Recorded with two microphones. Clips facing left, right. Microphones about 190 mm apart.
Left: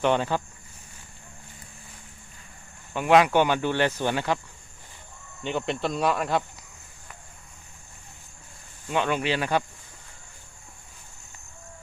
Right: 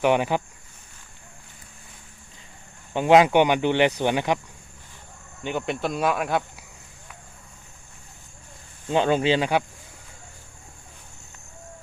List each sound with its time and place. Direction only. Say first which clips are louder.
0.0 s speech: right 3 dB; 15° right (ahead or behind)
2.9 s speech: right 3 dB; 20° right (ahead or behind)
5.4 s speech: right 1 dB; 5° right (ahead or behind)
8.9 s speech: right 5 dB; 30° right (ahead or behind)